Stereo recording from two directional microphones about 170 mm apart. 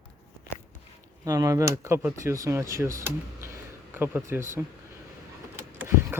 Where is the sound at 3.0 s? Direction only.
15° right (ahead or behind).